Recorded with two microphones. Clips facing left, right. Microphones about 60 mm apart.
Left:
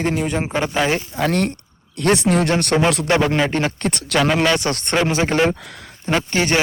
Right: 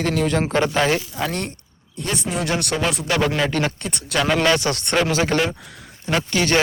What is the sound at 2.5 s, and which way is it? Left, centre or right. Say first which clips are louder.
Speech: left 4 dB; left.